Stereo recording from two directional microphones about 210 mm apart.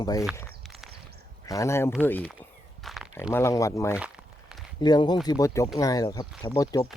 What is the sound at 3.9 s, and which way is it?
Crumpling, 5° right (ahead or behind).